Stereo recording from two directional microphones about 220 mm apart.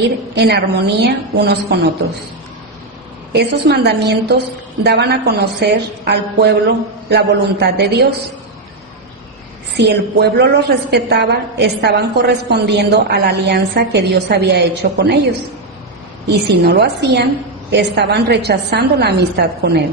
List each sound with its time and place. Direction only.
0.0 s a woman's voice: 50° right (ahead or behind)
3.3 s a woman's voice: 50° right (ahead or behind)
9.8 s a woman's voice: 50° right (ahead or behind)
16.4 s a woman's voice: 50° right (ahead or behind)